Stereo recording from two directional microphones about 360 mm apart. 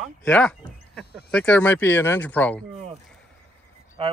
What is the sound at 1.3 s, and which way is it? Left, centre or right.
Speech, centre.